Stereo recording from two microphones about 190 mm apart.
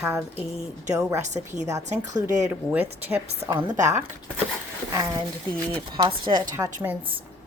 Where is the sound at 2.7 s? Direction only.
10° right (ahead or behind).